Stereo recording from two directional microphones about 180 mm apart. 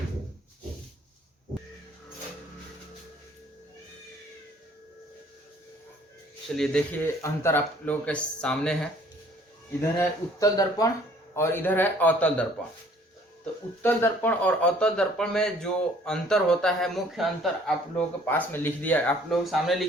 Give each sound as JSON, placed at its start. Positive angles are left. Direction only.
{"t": 6.6, "sound": "speech", "side_deg": 5}
{"t": 7.2, "sound": "speech", "side_deg": 15}
{"t": 10.0, "sound": "speech", "side_deg": 20}
{"t": 13.8, "sound": "speech", "side_deg": 10}
{"t": 17.9, "sound": "speech", "side_deg": 10}